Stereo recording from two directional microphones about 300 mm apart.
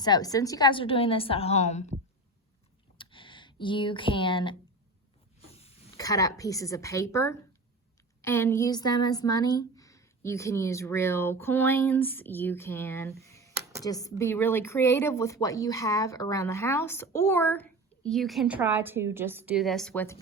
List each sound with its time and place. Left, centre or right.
0.0 s speech: centre
3.0 s computer keyboard: centre
5.5 s speech: centre